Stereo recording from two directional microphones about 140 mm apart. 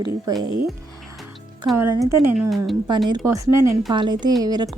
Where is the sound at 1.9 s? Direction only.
25° right (ahead or behind).